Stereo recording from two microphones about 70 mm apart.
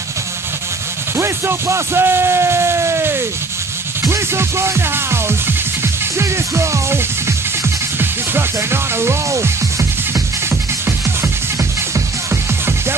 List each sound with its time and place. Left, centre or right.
1.1 s a sound: right
4.1 s music: right
9.0 s music: right